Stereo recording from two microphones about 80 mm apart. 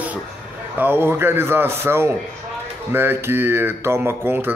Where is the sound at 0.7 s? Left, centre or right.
Right.